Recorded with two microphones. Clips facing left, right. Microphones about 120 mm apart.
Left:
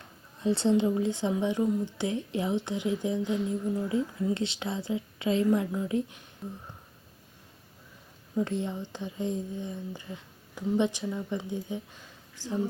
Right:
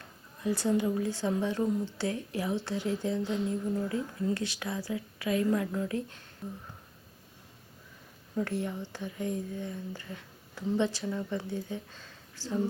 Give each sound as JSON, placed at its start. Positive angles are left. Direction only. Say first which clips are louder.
{"t": 0.4, "sound": "speech", "louder": "left 4 dB", "side_deg": 25}
{"t": 8.4, "sound": "speech", "louder": "left 2 dB", "side_deg": 20}